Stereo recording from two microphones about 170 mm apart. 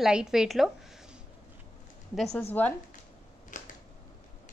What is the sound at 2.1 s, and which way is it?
Speech, centre (ahead or behind).